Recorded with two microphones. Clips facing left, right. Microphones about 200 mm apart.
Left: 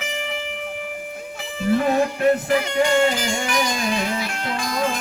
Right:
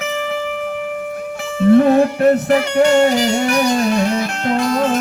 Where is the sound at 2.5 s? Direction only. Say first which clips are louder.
Right 6 dB; 70° right (ahead or behind).